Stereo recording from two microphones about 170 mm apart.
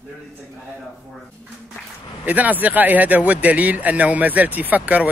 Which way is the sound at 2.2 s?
10° right (ahead or behind).